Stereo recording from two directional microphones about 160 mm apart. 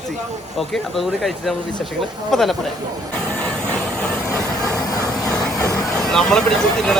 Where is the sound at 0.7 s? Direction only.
Centre (ahead or behind).